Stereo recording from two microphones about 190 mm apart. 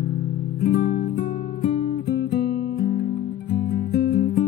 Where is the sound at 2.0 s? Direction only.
55° left (ahead or behind).